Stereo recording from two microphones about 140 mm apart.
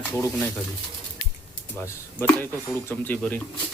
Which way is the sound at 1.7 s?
15° left (ahead or behind).